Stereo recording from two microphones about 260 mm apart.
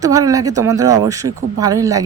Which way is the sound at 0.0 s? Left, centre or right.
Centre.